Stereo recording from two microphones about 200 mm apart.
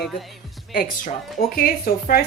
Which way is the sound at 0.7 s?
45° left (ahead or behind).